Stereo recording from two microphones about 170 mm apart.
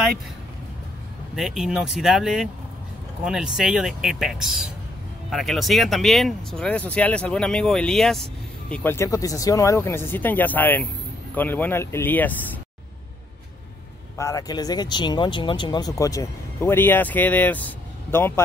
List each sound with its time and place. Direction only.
1.3 s speech: 5° right (ahead or behind)
14.1 s speech: 20° left (ahead or behind)